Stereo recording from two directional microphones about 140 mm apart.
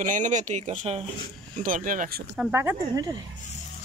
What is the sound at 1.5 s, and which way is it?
Speech, 70° right (ahead or behind).